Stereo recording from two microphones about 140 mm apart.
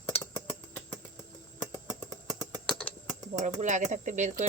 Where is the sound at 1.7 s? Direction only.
25° left (ahead or behind).